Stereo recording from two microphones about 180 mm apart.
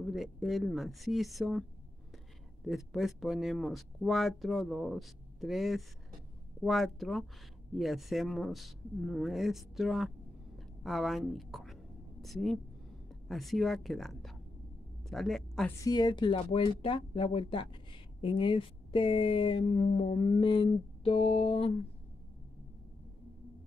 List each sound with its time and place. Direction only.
0.0 s speech: centre (ahead or behind)
10.8 s a sound: centre (ahead or behind)
13.3 s speech: centre (ahead or behind)
15.8 s speech: 20° left (ahead or behind)